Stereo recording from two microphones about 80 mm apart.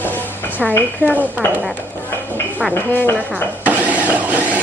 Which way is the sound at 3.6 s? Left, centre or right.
Centre.